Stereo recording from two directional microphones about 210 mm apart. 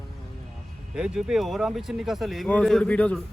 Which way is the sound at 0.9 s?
5° right (ahead or behind).